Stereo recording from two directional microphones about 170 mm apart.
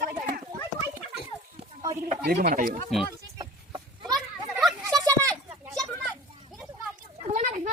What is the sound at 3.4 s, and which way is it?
Chicken, 25° right (ahead or behind).